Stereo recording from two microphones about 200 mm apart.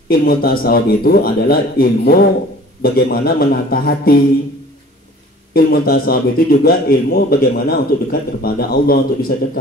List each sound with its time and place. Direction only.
0.1 s a man's voice: 50° left (ahead or behind)
5.5 s a man's voice: 50° left (ahead or behind)